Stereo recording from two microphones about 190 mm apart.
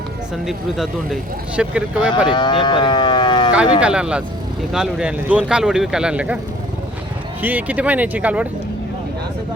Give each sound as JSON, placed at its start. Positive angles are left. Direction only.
{"t": 0.4, "sound": "speech", "side_deg": 0}
{"t": 2.2, "sound": "speech", "side_deg": 25}
{"t": 3.8, "sound": "speech", "side_deg": -5}
{"t": 7.4, "sound": "speech", "side_deg": -10}